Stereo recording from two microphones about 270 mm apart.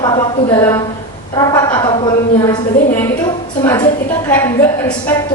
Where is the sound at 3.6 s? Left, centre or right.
Centre.